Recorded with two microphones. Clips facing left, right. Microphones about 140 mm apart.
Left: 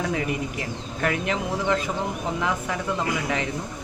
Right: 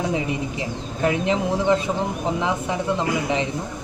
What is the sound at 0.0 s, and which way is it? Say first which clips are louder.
A woman's voice: right 2 dB; 20° right (ahead or behind).